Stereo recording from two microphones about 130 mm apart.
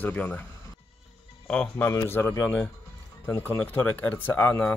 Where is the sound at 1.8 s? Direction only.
20° left (ahead or behind).